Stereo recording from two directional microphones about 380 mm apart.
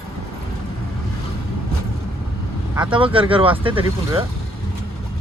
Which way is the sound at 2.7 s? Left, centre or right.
Centre.